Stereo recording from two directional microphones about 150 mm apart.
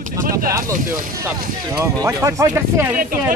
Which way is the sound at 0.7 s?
65° right (ahead or behind).